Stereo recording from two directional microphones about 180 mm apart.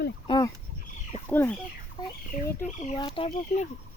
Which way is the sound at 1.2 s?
10° left (ahead or behind).